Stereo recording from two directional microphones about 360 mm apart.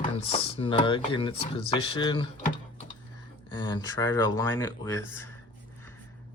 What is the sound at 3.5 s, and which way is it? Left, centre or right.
Speech, centre.